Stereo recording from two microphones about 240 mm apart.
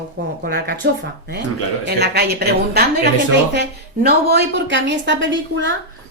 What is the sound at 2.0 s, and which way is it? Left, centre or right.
Speech, right.